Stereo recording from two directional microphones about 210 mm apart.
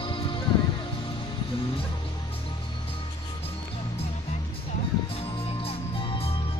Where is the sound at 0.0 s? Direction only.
25° left (ahead or behind).